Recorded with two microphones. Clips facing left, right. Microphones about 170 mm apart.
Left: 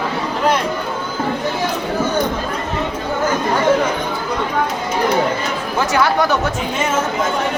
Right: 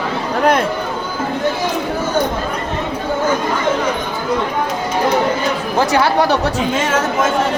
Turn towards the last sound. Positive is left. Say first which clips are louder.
# right 2 dB
turn(degrees=-30)  # may be behind; listen again after turning